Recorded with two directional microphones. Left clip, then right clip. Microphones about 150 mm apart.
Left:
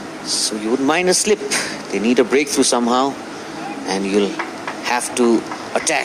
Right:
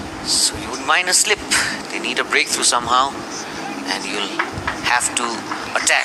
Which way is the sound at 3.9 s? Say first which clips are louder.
Left 6 dB; 30° right (ahead or behind).